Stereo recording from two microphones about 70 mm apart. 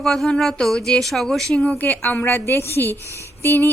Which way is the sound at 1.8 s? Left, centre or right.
Left.